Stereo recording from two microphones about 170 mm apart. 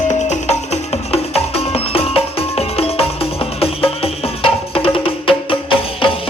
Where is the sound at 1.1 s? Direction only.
35° left (ahead or behind).